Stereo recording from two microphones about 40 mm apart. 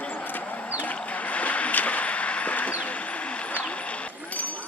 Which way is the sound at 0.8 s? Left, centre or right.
Left.